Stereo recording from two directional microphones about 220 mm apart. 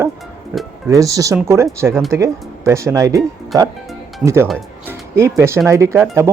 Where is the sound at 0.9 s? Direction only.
15° right (ahead or behind).